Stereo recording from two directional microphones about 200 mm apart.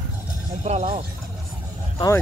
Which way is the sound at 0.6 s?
30° right (ahead or behind).